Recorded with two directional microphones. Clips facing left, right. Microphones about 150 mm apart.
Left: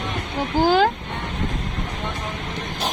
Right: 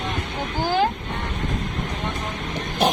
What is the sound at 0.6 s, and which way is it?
Speech, 90° left.